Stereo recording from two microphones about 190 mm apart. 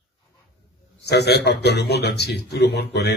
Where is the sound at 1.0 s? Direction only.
60° left (ahead or behind).